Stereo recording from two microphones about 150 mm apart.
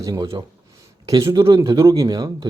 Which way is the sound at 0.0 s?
25° right (ahead or behind).